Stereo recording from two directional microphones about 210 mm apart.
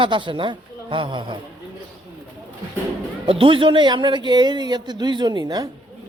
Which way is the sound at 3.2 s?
25° right (ahead or behind).